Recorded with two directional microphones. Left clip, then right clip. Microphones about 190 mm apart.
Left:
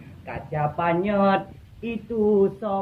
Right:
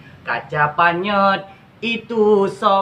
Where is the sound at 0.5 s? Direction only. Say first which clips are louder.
Right 7 dB; 20° right (ahead or behind).